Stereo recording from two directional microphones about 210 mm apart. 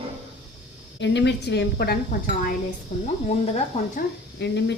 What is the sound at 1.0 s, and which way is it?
Speech, 55° left (ahead or behind).